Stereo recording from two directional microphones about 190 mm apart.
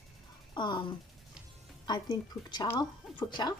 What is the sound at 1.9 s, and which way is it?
Speech, 20° left (ahead or behind).